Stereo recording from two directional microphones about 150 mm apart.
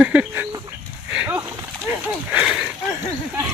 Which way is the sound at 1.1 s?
10° right (ahead or behind).